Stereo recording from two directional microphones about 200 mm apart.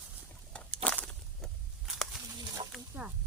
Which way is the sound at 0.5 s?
5° left (ahead or behind).